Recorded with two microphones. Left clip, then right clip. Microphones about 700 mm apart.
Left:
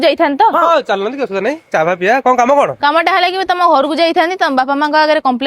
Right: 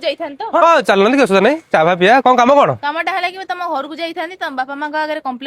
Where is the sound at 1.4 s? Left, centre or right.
Centre.